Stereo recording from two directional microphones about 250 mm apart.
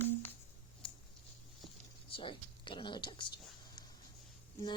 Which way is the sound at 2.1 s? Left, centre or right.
Centre.